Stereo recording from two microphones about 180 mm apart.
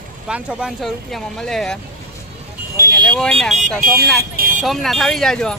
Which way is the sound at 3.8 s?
50° right (ahead or behind).